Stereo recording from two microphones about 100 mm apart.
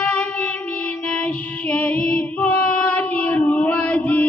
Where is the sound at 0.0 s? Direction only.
10° left (ahead or behind).